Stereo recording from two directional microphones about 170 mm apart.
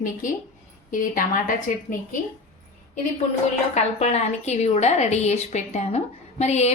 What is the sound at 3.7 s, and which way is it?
A woman's voice, 40° left (ahead or behind).